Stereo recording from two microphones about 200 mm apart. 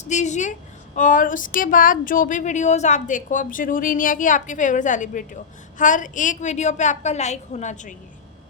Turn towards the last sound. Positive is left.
turn(degrees=40)  # may be behind; listen again after turning